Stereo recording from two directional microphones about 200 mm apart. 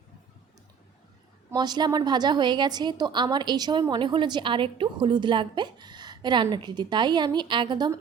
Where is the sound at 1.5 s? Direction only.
20° right (ahead or behind).